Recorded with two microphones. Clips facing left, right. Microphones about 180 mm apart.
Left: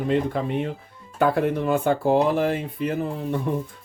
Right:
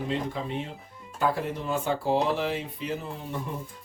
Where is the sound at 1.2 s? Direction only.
60° left (ahead or behind).